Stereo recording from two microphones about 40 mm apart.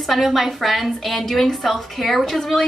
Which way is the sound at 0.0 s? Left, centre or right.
Centre.